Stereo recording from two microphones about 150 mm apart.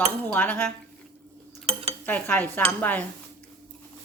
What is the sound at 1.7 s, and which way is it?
Cutlery, 40° right (ahead or behind).